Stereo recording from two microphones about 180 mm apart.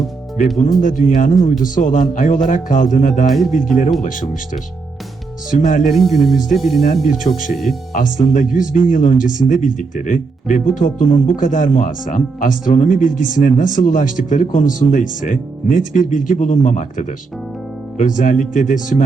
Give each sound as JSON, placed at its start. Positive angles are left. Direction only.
{"t": 0.3, "sound": "speech", "side_deg": 45}
{"t": 3.2, "sound": "speech", "side_deg": 0}
{"t": 4.0, "sound": "speech", "side_deg": 45}
{"t": 5.5, "sound": "speech", "side_deg": 45}
{"t": 5.9, "sound": "speech", "side_deg": 0}
{"t": 6.8, "sound": "speech", "side_deg": 40}
{"t": 7.5, "sound": "speech", "side_deg": 0}
{"t": 7.9, "sound": "speech", "side_deg": 45}
{"t": 18.2, "sound": "speech", "side_deg": 45}